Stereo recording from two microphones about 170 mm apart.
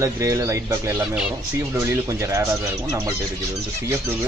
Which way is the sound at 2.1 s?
20° right (ahead or behind).